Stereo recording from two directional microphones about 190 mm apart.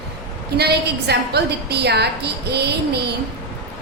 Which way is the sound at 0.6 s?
60° right (ahead or behind).